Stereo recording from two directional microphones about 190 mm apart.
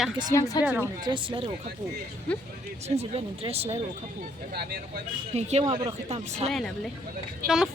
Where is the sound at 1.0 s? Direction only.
25° right (ahead or behind).